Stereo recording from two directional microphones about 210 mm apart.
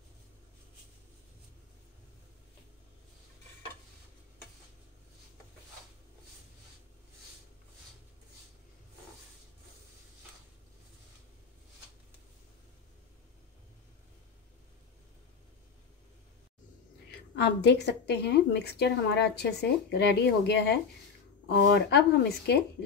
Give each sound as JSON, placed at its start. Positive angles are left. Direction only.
{"t": 17.4, "sound": "a woman's voice", "side_deg": 55}